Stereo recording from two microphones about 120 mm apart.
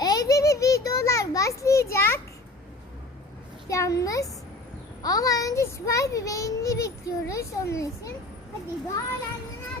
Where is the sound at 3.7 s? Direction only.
25° left (ahead or behind).